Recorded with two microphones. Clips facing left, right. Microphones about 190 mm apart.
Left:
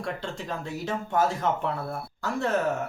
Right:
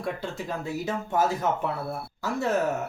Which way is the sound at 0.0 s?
5° right (ahead or behind).